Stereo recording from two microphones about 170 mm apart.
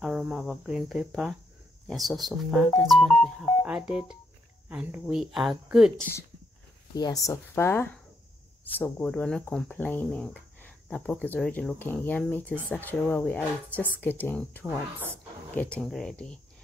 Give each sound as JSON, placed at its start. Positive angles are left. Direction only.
{"t": 0.0, "sound": "speech", "side_deg": -5}
{"t": 6.9, "sound": "speech", "side_deg": 25}